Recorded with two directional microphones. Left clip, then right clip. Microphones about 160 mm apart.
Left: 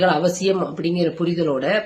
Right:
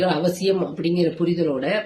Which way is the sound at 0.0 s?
5° left (ahead or behind).